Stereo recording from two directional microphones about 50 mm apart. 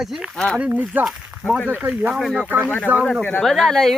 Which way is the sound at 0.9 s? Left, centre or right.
Right.